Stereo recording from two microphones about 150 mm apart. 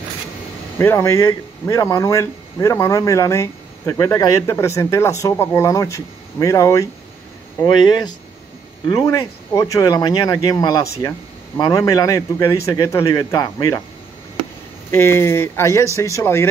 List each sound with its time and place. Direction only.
0.7 s speech: 15° left (ahead or behind)
14.9 s speech: 15° left (ahead or behind)